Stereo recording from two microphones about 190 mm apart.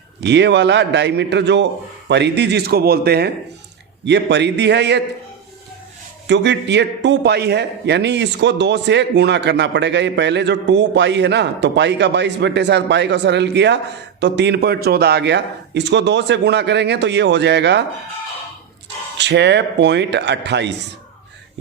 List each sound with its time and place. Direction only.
0.2 s a man's voice: 65° right (ahead or behind)
4.0 s a man's voice: 65° right (ahead or behind)
6.2 s a man's voice: 65° right (ahead or behind)
19.1 s a man's voice: 65° right (ahead or behind)